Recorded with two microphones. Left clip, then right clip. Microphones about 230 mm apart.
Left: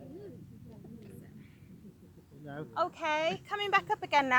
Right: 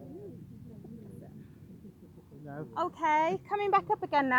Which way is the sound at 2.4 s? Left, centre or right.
Left.